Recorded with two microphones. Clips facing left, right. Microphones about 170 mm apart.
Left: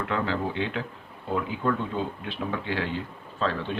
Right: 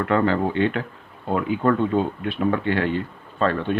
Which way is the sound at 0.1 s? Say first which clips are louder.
Right 9 dB; 55° right (ahead or behind).